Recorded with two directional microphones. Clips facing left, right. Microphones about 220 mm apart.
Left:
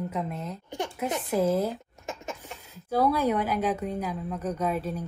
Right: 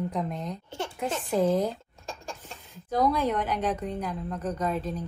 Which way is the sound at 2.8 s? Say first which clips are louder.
Left 1 dB; 10° left (ahead or behind).